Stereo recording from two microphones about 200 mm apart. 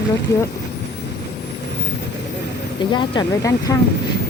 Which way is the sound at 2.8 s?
25° left (ahead or behind).